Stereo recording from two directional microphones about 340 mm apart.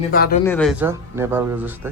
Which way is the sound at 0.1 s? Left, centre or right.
Left.